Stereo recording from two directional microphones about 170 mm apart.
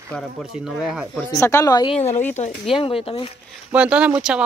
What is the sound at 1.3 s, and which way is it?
Speech, 15° left (ahead or behind).